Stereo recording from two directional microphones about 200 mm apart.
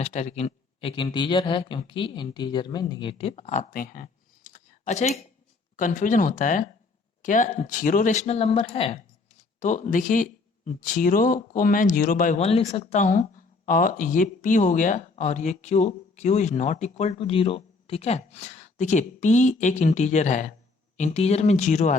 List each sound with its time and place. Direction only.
0.0 s speech: 35° left (ahead or behind)